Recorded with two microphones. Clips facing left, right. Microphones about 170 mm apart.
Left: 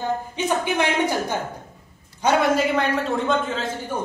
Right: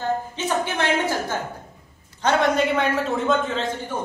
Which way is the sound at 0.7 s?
15° left (ahead or behind).